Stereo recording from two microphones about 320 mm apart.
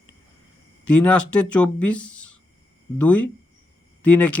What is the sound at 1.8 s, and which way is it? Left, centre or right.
Speech, left.